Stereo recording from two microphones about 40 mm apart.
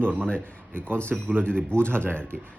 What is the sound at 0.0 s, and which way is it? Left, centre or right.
Speech, right.